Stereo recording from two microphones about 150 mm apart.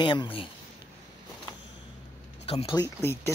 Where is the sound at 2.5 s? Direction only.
40° left (ahead or behind).